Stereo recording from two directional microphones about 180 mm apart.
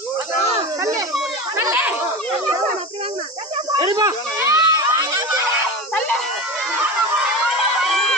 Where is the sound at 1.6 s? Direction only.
15° right (ahead or behind).